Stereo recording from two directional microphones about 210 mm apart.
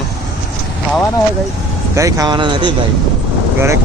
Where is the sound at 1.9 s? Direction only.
15° right (ahead or behind).